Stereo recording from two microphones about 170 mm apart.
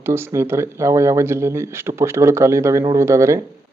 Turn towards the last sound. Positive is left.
turn(degrees=-15)  # may be behind; listen again after turning